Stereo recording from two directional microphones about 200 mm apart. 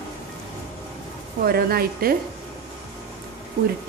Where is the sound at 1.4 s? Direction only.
50° right (ahead or behind).